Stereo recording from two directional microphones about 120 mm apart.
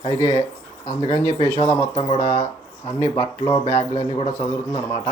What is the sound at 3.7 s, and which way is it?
Speech, 50° left (ahead or behind).